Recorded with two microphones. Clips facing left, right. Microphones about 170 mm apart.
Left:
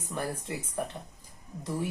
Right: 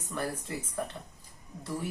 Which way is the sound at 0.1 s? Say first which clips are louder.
Even; 15° left (ahead or behind).